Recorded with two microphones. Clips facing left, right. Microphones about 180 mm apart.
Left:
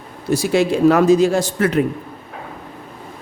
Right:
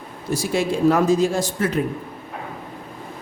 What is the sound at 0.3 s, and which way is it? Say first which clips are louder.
Speech: left 5 dB; 70° left (ahead or behind).